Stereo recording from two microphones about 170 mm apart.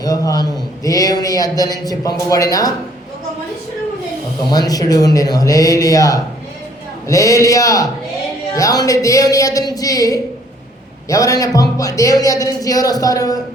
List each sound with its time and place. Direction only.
0.0 s a man's voice: 20° left (ahead or behind)
4.5 s a man's voice: 20° left (ahead or behind)